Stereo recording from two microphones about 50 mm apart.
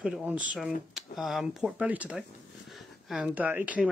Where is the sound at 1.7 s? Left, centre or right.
Right.